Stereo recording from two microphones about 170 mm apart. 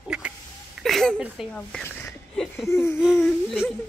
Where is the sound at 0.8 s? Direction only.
Centre (ahead or behind).